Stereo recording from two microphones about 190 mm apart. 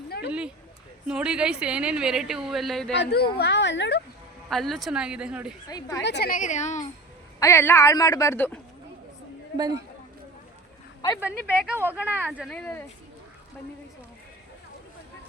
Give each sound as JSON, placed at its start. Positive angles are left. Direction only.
{"t": 0.3, "sound": "speech", "side_deg": -5}
{"t": 2.9, "sound": "speech", "side_deg": 60}
{"t": 4.4, "sound": "speech", "side_deg": 0}
{"t": 5.6, "sound": "speech", "side_deg": 20}
{"t": 6.0, "sound": "speech", "side_deg": 60}
{"t": 6.3, "sound": "a woman's voice", "side_deg": 40}
{"t": 7.3, "sound": "speech", "side_deg": 15}
{"t": 9.6, "sound": "speech", "side_deg": -20}
{"t": 11.2, "sound": "speech", "side_deg": -5}
{"t": 12.5, "sound": "speech", "side_deg": 5}